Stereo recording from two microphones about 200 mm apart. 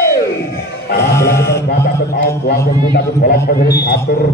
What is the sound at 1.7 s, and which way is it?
Mantra, 50° left (ahead or behind).